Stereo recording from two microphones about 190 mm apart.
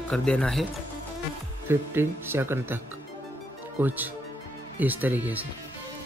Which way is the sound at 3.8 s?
10° right (ahead or behind).